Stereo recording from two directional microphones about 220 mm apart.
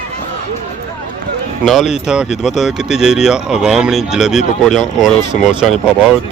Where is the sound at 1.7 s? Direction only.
Centre (ahead or behind).